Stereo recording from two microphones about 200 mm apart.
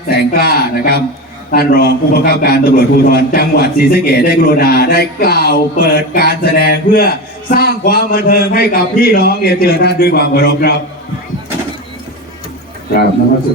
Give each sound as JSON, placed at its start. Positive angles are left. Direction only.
{"t": 0.1, "sound": "a man's voice", "side_deg": 50}